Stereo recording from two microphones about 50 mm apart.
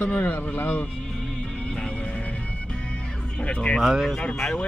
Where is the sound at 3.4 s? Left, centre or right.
Left.